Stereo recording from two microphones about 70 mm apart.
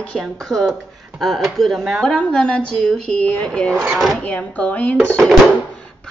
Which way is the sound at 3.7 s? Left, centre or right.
Right.